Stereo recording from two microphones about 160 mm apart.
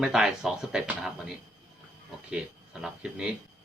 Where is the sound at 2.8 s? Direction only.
5° right (ahead or behind).